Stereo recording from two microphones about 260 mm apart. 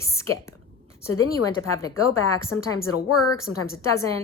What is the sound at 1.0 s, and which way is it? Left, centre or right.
Speech, left.